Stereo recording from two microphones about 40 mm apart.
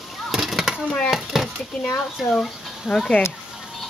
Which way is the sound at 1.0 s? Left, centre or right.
Centre.